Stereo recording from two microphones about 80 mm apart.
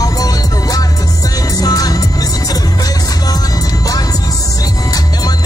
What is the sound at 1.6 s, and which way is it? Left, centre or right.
Music, left.